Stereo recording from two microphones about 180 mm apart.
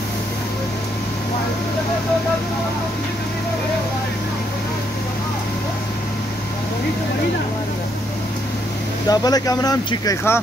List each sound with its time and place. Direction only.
9.0 s speech: 20° left (ahead or behind)